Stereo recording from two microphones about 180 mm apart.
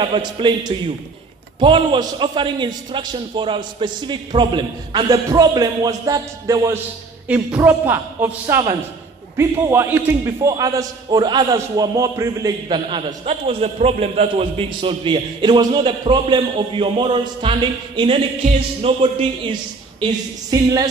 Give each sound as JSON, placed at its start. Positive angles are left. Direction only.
{"t": 0.0, "sound": "a man's voice", "side_deg": -25}
{"t": 20.0, "sound": "a man's voice", "side_deg": -20}